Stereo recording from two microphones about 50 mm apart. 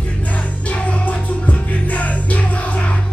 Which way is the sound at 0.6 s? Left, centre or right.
Left.